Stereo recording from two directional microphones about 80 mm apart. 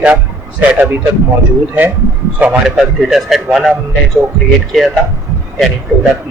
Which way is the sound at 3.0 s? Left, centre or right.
Centre.